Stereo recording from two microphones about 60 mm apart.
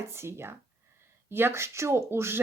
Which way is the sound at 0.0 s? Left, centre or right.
Right.